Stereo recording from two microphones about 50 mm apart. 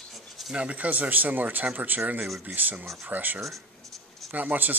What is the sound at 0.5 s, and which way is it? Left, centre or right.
Speech, right.